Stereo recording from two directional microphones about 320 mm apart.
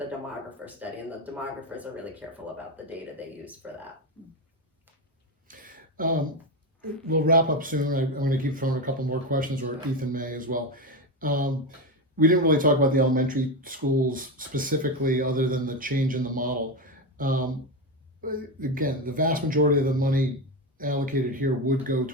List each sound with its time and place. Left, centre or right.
0.6 s speech: centre
5.5 s a sound: right
7.1 s speech: right